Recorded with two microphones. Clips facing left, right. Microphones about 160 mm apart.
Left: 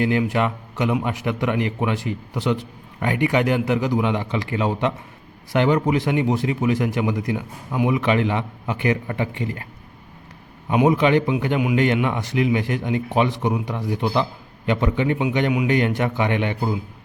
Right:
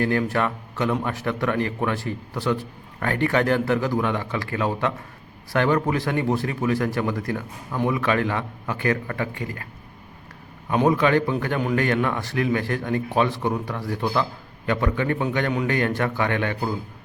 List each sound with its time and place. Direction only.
0.0 s a man's voice: 15° left (ahead or behind)
10.7 s a man's voice: 20° left (ahead or behind)